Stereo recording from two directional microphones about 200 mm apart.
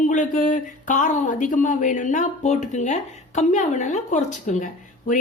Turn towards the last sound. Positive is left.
turn(degrees=40)  # may be behind; listen again after turning